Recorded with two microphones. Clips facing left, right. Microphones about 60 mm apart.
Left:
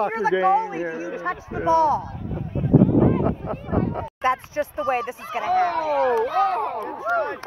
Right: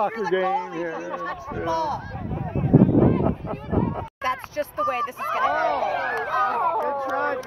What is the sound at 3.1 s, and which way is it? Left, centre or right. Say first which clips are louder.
Speech: even; centre.